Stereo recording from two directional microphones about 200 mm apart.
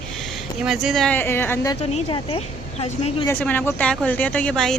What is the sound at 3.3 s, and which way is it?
Speech, 10° left (ahead or behind).